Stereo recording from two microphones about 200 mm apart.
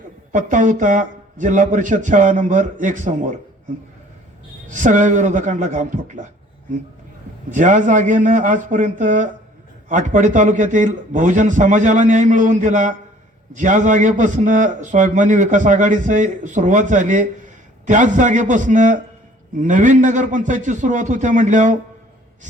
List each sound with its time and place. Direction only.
0.3 s a man's voice: 40° right (ahead or behind)
4.7 s a man's voice: 40° right (ahead or behind)
7.5 s a man's voice: 40° right (ahead or behind)